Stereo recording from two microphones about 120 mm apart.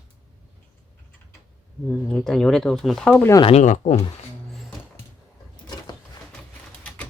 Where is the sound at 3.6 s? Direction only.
85° left.